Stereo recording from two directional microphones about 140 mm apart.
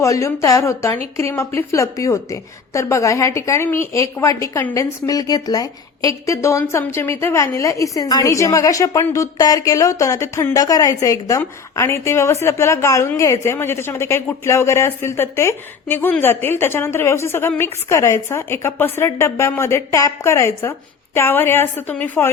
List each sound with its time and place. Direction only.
0.0 s a woman's voice: 20° left (ahead or behind)